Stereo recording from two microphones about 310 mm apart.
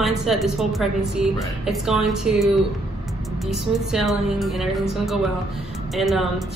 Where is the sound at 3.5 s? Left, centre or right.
Centre.